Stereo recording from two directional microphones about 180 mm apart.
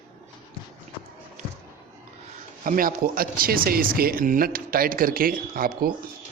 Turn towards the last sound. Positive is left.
turn(degrees=-55)  # may be behind; listen again after turning